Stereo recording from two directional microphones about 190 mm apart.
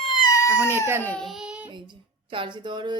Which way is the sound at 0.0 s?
25° left (ahead or behind).